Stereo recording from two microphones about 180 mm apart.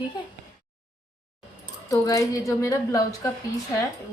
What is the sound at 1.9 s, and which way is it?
A woman's voice, 20° left (ahead or behind).